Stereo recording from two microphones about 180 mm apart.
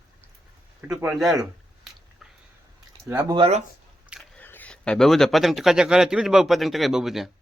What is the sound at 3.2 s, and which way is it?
Speech, 25° right (ahead or behind).